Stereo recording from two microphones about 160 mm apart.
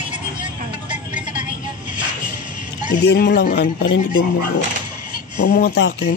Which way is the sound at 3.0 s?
80° left.